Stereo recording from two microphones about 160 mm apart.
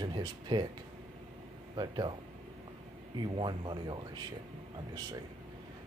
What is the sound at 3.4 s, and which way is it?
Speech, 30° right (ahead or behind).